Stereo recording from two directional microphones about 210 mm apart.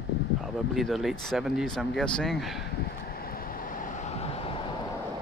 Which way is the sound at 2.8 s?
45° left (ahead or behind).